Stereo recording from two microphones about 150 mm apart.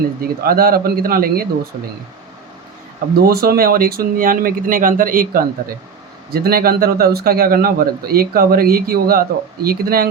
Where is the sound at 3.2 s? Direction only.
85° right; by 5.5 s 70° right (ahead or behind).